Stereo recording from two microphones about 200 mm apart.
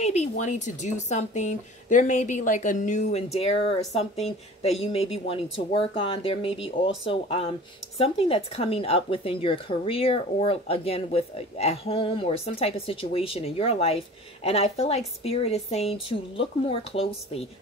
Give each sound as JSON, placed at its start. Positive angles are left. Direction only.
{"t": 0.0, "sound": "speech", "side_deg": 35}